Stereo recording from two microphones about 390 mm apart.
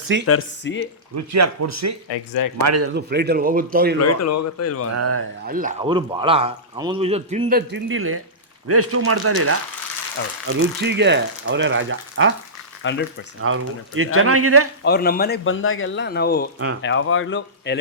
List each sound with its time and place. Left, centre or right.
0.3 s speech: left
1.1 s speech: right
2.0 s speech: left
2.6 s speech: right
2.9 s speech: right
4.0 s speech: left
4.9 s speech: right
5.5 s speech: right
10.8 s speech: right
12.8 s speech: left
13.4 s speech: right
14.8 s speech: left